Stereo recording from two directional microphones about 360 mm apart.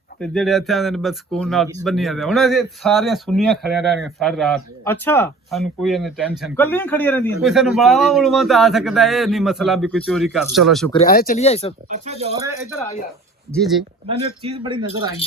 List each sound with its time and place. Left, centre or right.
0.2 s speech: centre
11.1 s speech: left
11.9 s speech: centre
13.5 s speech: centre
14.1 s speech: centre